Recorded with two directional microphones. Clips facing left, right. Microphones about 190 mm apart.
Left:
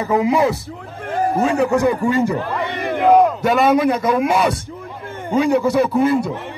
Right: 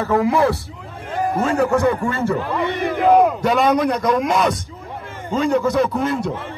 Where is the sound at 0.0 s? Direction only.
15° left (ahead or behind).